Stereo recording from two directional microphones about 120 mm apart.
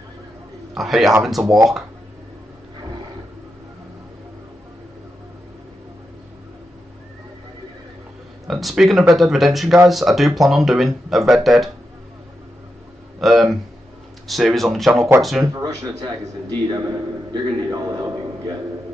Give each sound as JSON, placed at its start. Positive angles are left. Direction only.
{"t": 0.7, "sound": "speech", "side_deg": 0}
{"t": 8.5, "sound": "speech", "side_deg": 0}
{"t": 13.2, "sound": "speech", "side_deg": 0}
{"t": 15.4, "sound": "a man's voice", "side_deg": -30}